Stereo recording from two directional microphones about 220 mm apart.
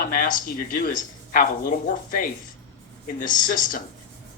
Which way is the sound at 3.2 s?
35° left (ahead or behind).